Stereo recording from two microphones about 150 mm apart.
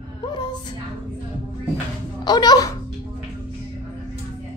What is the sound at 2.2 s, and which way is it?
Speech, 25° left (ahead or behind).